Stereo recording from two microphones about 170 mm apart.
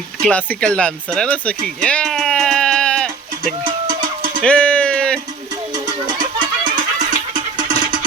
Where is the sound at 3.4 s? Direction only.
55° right (ahead or behind).